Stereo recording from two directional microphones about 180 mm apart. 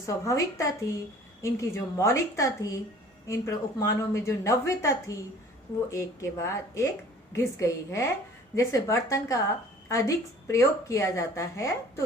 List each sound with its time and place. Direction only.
0.0 s speech: 15° left (ahead or behind)